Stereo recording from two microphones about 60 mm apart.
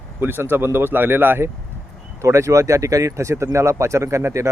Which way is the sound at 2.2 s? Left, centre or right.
Right.